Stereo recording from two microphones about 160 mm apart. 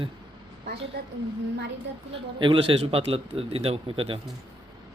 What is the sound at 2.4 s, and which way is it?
Speech, 30° right (ahead or behind).